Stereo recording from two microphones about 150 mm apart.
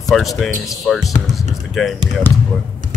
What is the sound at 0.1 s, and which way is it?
Speech, centre (ahead or behind).